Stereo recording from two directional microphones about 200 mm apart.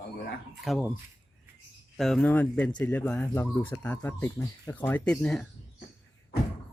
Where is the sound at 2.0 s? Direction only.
5° left (ahead or behind).